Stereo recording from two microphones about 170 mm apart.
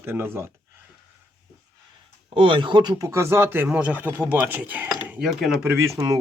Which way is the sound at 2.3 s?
30° right (ahead or behind).